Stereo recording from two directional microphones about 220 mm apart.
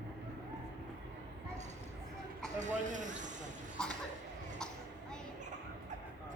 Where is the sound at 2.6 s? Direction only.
35° right (ahead or behind).